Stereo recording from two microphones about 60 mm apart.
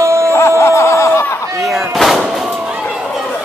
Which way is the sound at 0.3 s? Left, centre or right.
Left.